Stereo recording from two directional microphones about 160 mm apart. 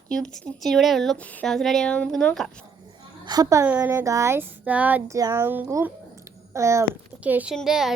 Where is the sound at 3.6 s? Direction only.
10° right (ahead or behind).